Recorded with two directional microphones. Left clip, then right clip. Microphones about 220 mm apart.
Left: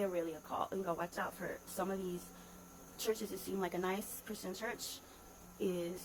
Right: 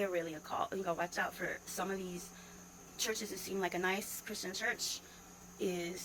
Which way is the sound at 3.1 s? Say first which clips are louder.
Right 2 dB; 15° left (ahead or behind).